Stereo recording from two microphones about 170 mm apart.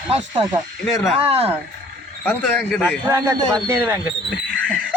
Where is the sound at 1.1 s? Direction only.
35° right (ahead or behind).